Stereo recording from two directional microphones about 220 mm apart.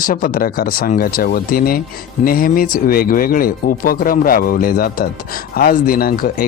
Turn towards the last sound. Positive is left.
turn(degrees=40)  # may be behind; listen again after turning